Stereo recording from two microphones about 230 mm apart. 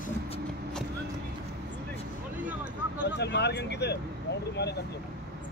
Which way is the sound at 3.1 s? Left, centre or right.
Left.